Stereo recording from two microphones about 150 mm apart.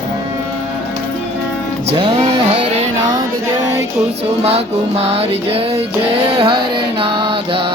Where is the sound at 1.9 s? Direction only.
40° right (ahead or behind).